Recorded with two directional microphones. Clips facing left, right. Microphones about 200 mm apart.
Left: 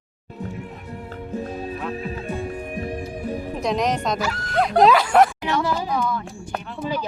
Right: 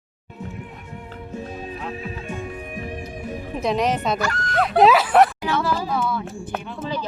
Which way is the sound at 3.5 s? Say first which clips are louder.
Right 2 dB; centre (ahead or behind).